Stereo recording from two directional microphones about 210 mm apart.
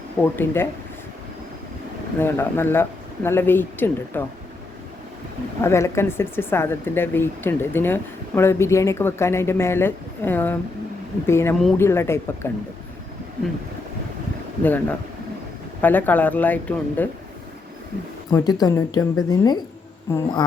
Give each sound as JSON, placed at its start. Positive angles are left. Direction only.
{"t": 0.2, "sound": "speech", "side_deg": 10}
{"t": 2.1, "sound": "speech", "side_deg": 10}
{"t": 5.6, "sound": "speech", "side_deg": 15}
{"t": 14.6, "sound": "speech", "side_deg": 10}
{"t": 18.3, "sound": "speech", "side_deg": 20}